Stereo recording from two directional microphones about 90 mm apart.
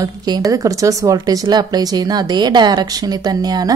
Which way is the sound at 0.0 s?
45° right (ahead or behind).